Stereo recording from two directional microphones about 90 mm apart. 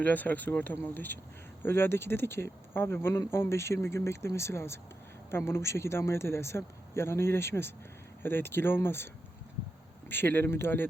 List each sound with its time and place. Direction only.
0.0 s speech: 20° left (ahead or behind)
10.1 s speech: 25° left (ahead or behind)